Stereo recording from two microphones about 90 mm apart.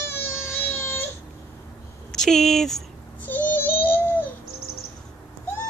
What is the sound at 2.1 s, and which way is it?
Speech, 5° left (ahead or behind).